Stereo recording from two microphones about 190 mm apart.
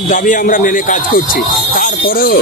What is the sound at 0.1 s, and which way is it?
Speech, 45° left (ahead or behind).